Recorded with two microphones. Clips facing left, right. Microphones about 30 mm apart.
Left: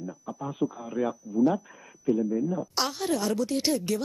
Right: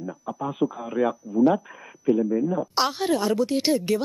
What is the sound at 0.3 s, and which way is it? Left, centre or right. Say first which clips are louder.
Speech: right 5 dB; right.